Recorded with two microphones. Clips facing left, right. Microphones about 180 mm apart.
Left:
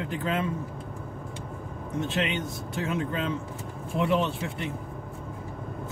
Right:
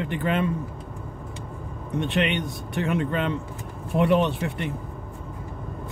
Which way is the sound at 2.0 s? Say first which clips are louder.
Right 4 dB; 75° right (ahead or behind).